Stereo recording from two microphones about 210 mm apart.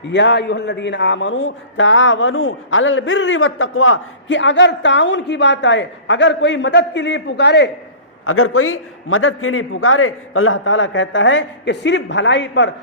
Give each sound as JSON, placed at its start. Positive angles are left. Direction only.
{"t": 0.0, "sound": "a man's voice", "side_deg": 60}
{"t": 8.2, "sound": "a man's voice", "side_deg": 90}